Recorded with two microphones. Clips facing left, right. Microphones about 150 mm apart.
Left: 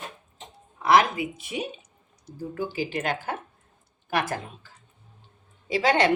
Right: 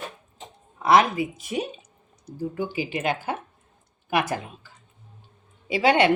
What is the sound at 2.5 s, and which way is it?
Speech, 15° right (ahead or behind).